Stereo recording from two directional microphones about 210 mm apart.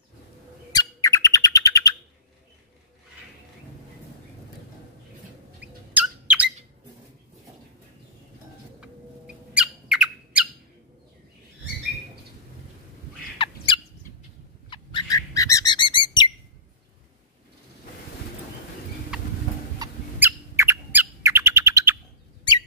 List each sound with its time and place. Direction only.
0.7 s bird: 15° left (ahead or behind)
5.6 s a sound: 5° right (ahead or behind)
8.8 s squawk: 5° right (ahead or behind)
14.7 s bird: 20° left (ahead or behind)
19.1 s horse: 5° right (ahead or behind)
19.8 s bird: 10° right (ahead or behind)